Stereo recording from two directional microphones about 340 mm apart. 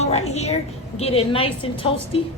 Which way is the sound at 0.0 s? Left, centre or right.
Centre.